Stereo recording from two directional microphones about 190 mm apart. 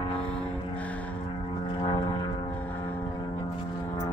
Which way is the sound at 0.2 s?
5° left (ahead or behind).